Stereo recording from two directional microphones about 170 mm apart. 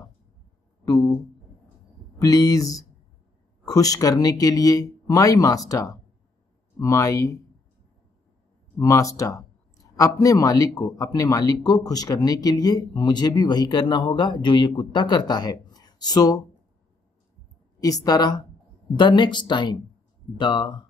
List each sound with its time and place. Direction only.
0.8 s speech: 20° left (ahead or behind)
2.1 s speech: 20° left (ahead or behind)
8.7 s a sound: 20° left (ahead or behind)
10.2 s speech: 20° left (ahead or behind)
17.7 s speech: 20° left (ahead or behind)